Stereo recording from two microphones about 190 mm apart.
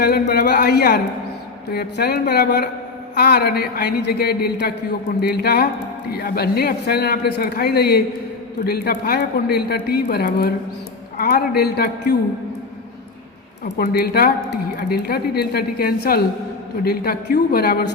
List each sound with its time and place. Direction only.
0.0 s speech: 55° left (ahead or behind)
13.7 s a woman's voice: 55° left (ahead or behind)